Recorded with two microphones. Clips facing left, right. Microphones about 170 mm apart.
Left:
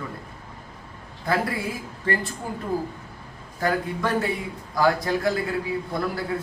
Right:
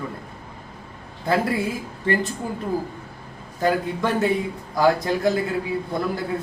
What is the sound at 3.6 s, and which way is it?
Speech, 20° right (ahead or behind).